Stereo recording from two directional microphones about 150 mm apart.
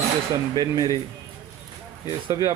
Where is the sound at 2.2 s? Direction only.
25° right (ahead or behind).